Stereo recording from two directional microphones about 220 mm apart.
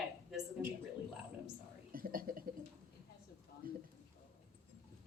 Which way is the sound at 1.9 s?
40° right (ahead or behind).